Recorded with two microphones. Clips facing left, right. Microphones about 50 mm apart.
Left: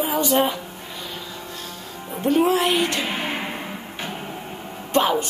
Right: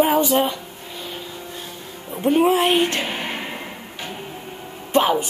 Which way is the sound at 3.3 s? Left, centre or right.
Centre.